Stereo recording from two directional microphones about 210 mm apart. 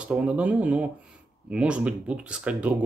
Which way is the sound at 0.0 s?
5° right (ahead or behind).